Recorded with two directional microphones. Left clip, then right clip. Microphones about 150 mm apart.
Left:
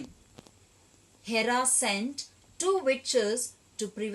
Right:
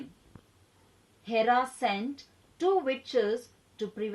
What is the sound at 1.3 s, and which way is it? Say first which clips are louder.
Speech: right 2 dB; 40° right (ahead or behind).